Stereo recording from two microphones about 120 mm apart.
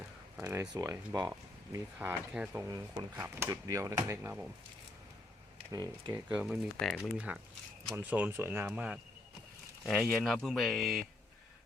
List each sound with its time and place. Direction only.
0.4 s speech: 25° right (ahead or behind)
2.6 s speech: 30° right (ahead or behind)
6.1 s speech: 15° right (ahead or behind)
6.4 s speech: centre (ahead or behind)
7.9 s speech: 15° right (ahead or behind)
9.8 s speech: centre (ahead or behind)